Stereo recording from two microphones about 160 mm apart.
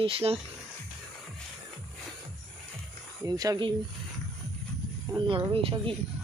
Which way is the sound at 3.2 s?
20° right (ahead or behind).